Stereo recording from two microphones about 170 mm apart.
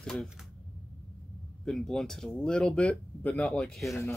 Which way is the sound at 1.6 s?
5° left (ahead or behind).